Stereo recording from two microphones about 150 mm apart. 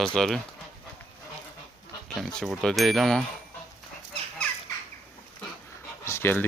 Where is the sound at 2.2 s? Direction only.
Centre (ahead or behind).